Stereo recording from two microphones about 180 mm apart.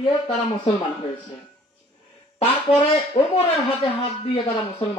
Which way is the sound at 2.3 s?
30° left (ahead or behind).